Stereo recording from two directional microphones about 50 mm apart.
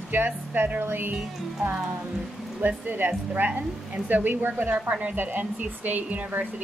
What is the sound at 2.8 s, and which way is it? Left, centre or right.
Speech, right.